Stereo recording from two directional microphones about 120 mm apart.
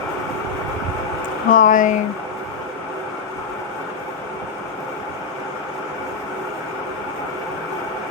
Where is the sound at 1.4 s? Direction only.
90° left.